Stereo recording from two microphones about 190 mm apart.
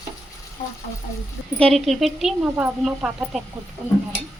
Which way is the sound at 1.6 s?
Centre (ahead or behind).